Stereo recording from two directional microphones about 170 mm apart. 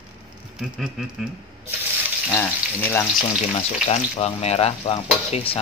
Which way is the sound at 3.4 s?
40° left (ahead or behind).